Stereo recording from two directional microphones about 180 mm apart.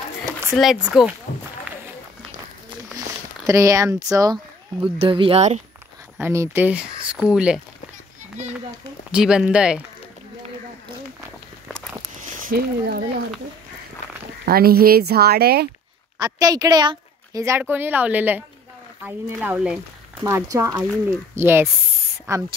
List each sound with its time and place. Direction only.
0.6 s speech: centre (ahead or behind)
3.4 s speech: 20° right (ahead or behind)
5.0 s speech: 30° right (ahead or behind)
6.2 s a woman's voice: 15° right (ahead or behind)
9.1 s speech: 5° right (ahead or behind)
12.2 s a sound: 55° right (ahead or behind)
14.4 s speech: 60° right (ahead or behind)
16.2 s a woman's voice: 20° right (ahead or behind)